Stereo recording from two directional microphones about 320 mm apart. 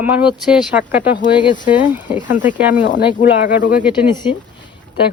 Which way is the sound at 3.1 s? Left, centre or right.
Left.